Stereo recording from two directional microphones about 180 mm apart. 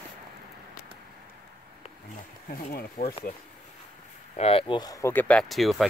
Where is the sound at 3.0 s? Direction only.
50° left (ahead or behind).